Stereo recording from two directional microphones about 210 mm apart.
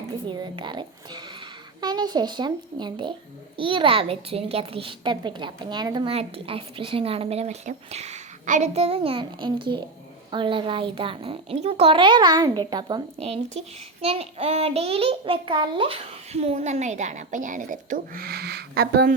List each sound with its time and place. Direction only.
0.3 s speech: 20° right (ahead or behind); by 19.1 s 50° right (ahead or behind)